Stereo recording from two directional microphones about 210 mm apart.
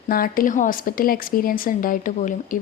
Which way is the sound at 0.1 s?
40° left (ahead or behind).